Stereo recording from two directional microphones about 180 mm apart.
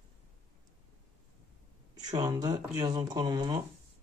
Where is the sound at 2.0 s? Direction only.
20° right (ahead or behind).